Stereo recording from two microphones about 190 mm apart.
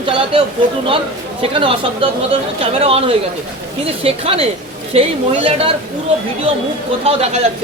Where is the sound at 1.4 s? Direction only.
30° right (ahead or behind).